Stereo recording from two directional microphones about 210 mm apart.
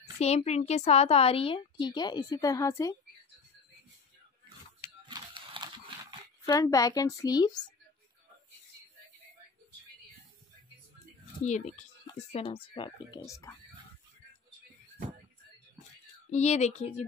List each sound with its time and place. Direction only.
0.2 s a woman's voice: 30° left (ahead or behind); by 3.0 s 15° left (ahead or behind)
5.0 s a sound: 20° right (ahead or behind)
6.4 s a woman's voice: 15° left (ahead or behind)
11.4 s a woman's voice: 35° left (ahead or behind); by 13.6 s 15° left (ahead or behind)
16.3 s speech: 30° left (ahead or behind)